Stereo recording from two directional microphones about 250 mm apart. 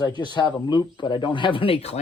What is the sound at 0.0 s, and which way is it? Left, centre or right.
Speech, centre.